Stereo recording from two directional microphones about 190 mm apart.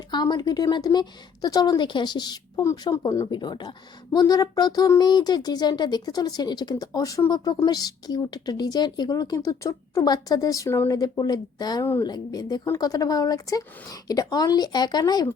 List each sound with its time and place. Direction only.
0.1 s speech: 20° left (ahead or behind)